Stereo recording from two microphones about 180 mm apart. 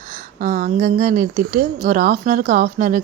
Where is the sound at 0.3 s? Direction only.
50° right (ahead or behind).